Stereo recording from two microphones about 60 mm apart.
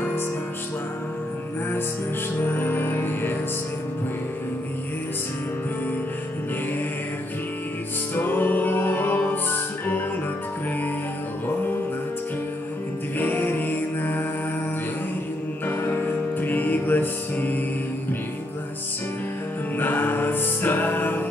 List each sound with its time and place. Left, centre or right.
2.4 s music: left
8.1 s music: left
13.2 s music: left
15.6 s music: left
19.8 s music: left